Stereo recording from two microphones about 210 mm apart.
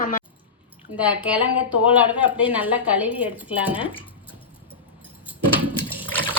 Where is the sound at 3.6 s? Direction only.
25° left (ahead or behind).